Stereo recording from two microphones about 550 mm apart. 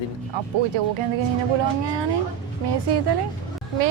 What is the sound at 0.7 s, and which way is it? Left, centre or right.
Speech, right.